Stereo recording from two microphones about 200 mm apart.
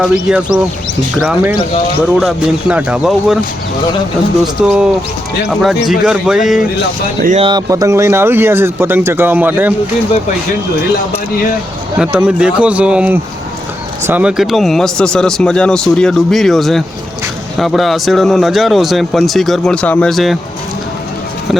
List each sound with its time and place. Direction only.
0.0 s speech: 5° right (ahead or behind)
4.6 s speech: 5° right (ahead or behind)
7.2 s speech: 40° right (ahead or behind)
7.4 s speech: 20° right (ahead or behind)
11.9 s speech: 5° right (ahead or behind)